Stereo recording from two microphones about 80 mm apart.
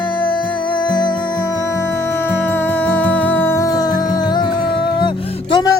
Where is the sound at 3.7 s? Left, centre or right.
Left.